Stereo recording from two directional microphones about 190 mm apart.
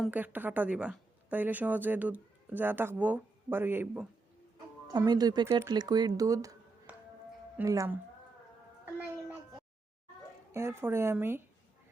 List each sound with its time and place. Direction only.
0.0 s a woman's voice: 10° right (ahead or behind)
4.9 s speech: 20° right (ahead or behind)
6.9 s music: 10° right (ahead or behind)
7.6 s a woman's voice: 15° right (ahead or behind)
8.8 s a sound: 10° right (ahead or behind)
10.5 s a woman's voice: 15° right (ahead or behind)